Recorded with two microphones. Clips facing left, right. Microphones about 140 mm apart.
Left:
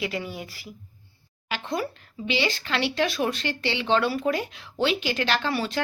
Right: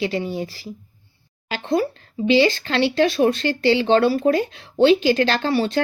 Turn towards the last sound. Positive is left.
turn(degrees=-30)  # may be behind; listen again after turning